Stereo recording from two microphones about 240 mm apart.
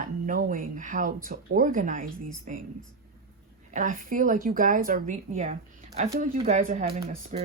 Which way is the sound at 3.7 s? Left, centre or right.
Right.